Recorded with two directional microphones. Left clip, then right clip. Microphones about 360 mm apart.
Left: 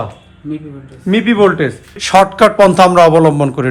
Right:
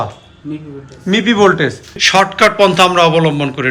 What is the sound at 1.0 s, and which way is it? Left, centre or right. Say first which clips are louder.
Speech: even; centre.